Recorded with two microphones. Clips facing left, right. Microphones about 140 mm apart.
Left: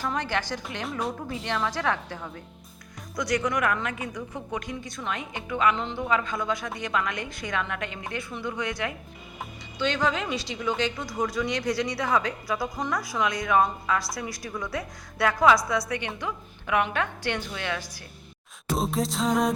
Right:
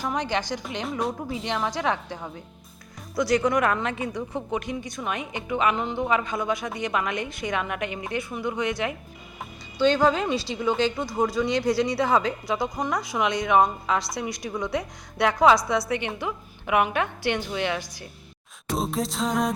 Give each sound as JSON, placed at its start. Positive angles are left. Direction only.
{"t": 0.0, "sound": "a woman's voice", "side_deg": -15}
{"t": 0.9, "sound": "music", "side_deg": 0}
{"t": 1.5, "sound": "a woman's voice", "side_deg": -20}
{"t": 3.2, "sound": "a woman's voice", "side_deg": -30}
{"t": 9.7, "sound": "a woman's voice", "side_deg": -35}
{"t": 18.7, "sound": "music", "side_deg": 0}